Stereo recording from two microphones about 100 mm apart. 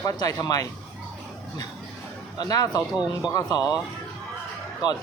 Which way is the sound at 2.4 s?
40° left (ahead or behind).